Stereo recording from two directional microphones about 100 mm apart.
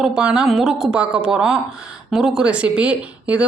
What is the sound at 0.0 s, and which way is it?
Speech, 10° right (ahead or behind).